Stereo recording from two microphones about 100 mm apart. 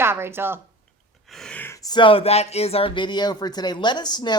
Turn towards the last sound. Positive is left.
turn(degrees=45)  # may be behind; listen again after turning